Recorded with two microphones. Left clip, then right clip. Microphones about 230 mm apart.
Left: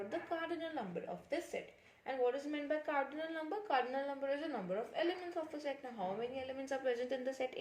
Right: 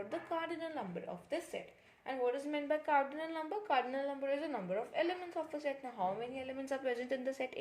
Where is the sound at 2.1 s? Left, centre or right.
Right.